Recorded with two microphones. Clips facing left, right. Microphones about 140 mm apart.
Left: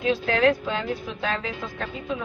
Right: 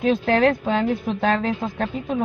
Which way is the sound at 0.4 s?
50° right (ahead or behind).